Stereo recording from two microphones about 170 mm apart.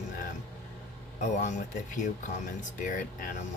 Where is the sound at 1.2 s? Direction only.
45° left (ahead or behind).